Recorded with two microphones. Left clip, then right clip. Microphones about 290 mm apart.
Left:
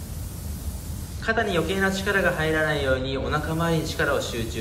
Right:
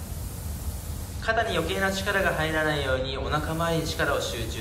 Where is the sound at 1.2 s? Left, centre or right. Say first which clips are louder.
Left 2 dB; centre.